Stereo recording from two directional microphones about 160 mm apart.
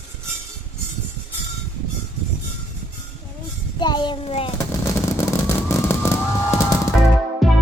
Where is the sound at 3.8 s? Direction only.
30° left (ahead or behind).